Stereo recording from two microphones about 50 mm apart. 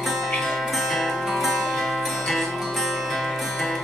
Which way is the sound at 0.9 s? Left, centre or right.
Centre.